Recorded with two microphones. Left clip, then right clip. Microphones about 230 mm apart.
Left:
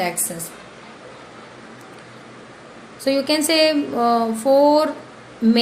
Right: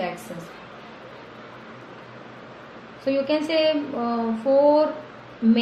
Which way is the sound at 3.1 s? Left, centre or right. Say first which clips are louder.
Left 4 dB; left.